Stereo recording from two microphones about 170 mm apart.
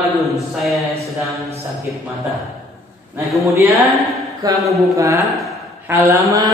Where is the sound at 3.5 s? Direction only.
15° right (ahead or behind).